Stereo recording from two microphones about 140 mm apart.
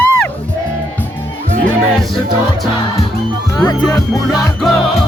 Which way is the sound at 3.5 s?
30° left (ahead or behind).